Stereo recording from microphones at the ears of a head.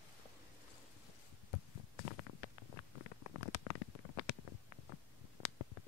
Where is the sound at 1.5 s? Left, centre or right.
Left.